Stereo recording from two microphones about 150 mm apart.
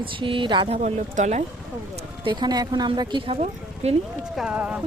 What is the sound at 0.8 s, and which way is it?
Speech, 50° right (ahead or behind).